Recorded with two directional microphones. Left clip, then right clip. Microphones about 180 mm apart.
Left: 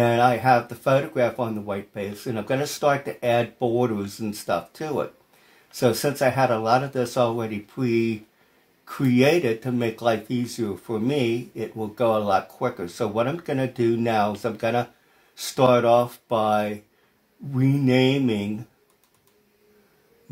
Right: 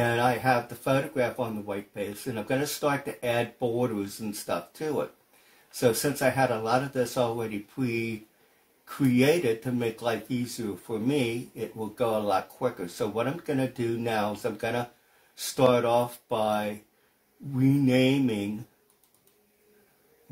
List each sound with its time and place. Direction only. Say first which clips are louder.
0.0 s speech: left 6 dB; 40° left (ahead or behind)